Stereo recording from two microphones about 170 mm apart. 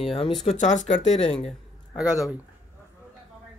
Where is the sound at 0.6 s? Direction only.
45° left (ahead or behind).